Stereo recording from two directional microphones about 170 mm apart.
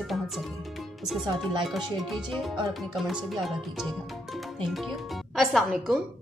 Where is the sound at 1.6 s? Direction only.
Centre (ahead or behind).